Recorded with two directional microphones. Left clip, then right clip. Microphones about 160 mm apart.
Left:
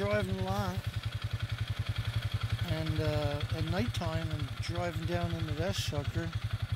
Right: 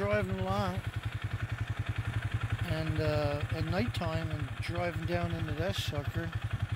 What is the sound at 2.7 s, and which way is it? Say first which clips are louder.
Speech: right 2 dB; 5° left (ahead or behind).